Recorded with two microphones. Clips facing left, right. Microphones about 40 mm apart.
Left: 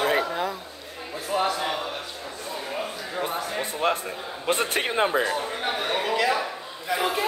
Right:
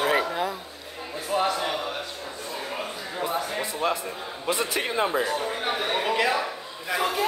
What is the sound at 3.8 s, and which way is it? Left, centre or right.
A man's voice, left.